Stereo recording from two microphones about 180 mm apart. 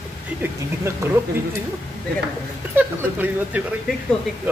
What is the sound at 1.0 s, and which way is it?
Speech, 15° right (ahead or behind).